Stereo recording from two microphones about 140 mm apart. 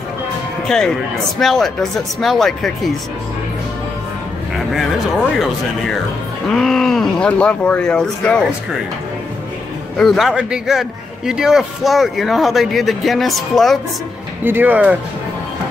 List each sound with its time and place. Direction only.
0.7 s a man's voice: 5° left (ahead or behind)
6.5 s a man's voice: 5° left (ahead or behind)
9.9 s a man's voice: centre (ahead or behind)
14.4 s speech: 15° right (ahead or behind)